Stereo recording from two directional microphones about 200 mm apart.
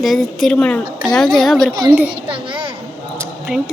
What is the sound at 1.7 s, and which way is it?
Speech, 20° right (ahead or behind).